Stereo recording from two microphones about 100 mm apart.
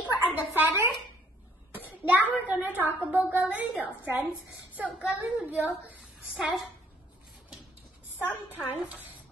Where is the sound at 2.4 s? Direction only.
15° right (ahead or behind).